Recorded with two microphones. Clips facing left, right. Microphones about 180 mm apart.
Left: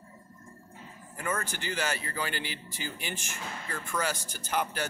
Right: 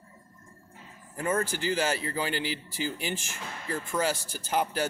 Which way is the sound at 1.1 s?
30° right (ahead or behind).